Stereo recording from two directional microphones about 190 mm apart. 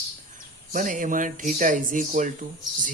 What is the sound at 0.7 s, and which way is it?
Speech, 45° right (ahead or behind).